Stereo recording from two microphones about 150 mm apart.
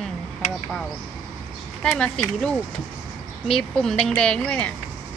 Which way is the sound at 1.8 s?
5° left (ahead or behind).